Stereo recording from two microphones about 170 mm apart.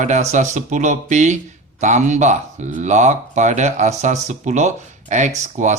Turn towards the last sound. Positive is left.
turn(degrees=-45)  # may be behind; listen again after turning